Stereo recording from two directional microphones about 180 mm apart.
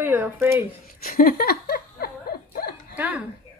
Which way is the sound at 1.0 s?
55° left (ahead or behind).